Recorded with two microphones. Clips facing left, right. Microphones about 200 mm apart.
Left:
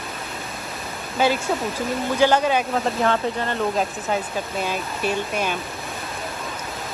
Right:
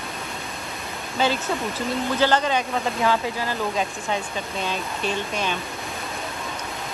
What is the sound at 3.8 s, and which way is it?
Speech, 5° left (ahead or behind).